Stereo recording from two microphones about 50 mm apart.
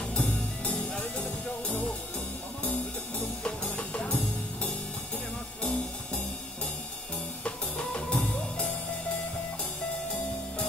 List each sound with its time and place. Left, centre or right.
0.0 s music: left
2.6 s music: left
5.6 s music: left
7.4 s music: left